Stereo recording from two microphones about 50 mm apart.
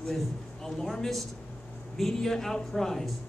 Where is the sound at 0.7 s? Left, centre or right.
Centre.